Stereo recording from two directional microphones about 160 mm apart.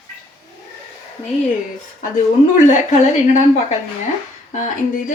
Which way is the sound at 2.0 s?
55° left (ahead or behind).